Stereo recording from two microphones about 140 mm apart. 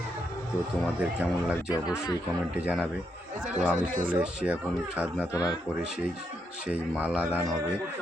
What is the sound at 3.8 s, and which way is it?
Speech, 75° right (ahead or behind).